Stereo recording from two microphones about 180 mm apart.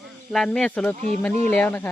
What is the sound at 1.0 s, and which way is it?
Speech, 40° right (ahead or behind).